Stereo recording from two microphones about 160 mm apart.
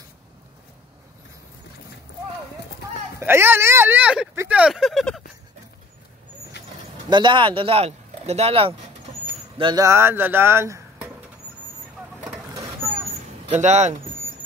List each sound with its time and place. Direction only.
3.2 s speech: 15° right (ahead or behind)
7.1 s speech: 30° right (ahead or behind)
9.8 s speech: 15° right (ahead or behind)
13.5 s speech: 45° right (ahead or behind)